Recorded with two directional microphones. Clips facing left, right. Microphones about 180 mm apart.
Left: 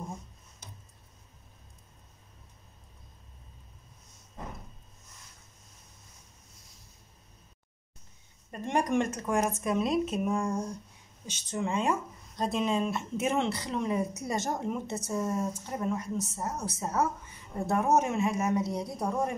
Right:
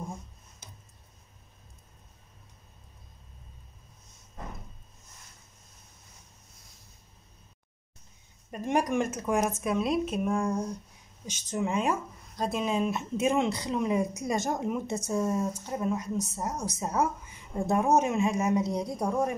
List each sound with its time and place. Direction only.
8.5 s a woman's voice: 10° right (ahead or behind)